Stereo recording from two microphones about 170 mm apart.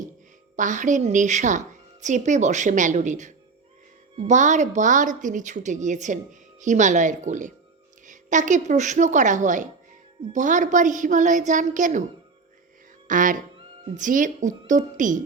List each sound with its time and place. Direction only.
0.5 s a woman's voice: 45° right (ahead or behind)
13.1 s a woman's voice: 50° right (ahead or behind)